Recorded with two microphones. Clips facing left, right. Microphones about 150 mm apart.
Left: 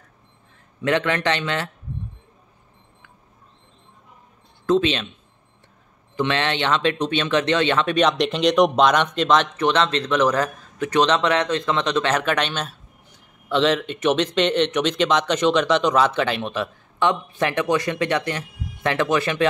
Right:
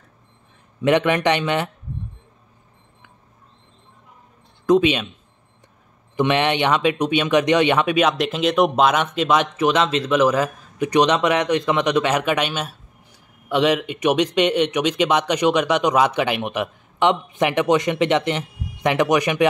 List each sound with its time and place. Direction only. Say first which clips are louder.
0.8 s speech: right 4 dB; 15° right (ahead or behind)
4.6 s speech: right 3 dB; 10° right (ahead or behind)
6.1 s speech: right 4 dB; 15° right (ahead or behind)